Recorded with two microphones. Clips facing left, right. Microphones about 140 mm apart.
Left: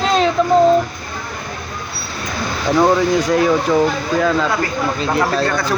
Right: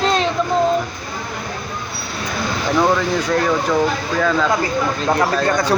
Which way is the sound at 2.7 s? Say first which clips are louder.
Left 4 dB; 10° left (ahead or behind).